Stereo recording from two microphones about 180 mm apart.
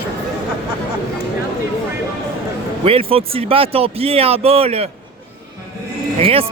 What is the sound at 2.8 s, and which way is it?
Speech, 30° right (ahead or behind).